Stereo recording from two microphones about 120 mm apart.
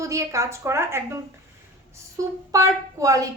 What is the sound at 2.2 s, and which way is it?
A woman's voice, 25° right (ahead or behind).